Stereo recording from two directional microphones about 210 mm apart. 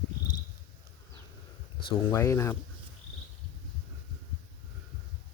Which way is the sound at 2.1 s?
15° left (ahead or behind).